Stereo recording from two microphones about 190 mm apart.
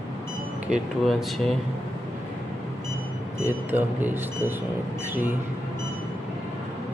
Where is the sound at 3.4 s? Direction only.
10° right (ahead or behind).